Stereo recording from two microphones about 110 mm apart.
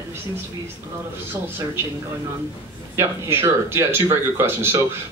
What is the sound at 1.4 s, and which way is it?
Speech, 20° right (ahead or behind).